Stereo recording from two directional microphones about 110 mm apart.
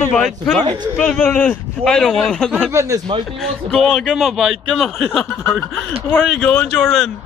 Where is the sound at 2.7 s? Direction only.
25° right (ahead or behind).